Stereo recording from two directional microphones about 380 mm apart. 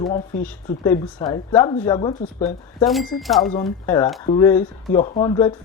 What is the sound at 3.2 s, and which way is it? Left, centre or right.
Speech, centre.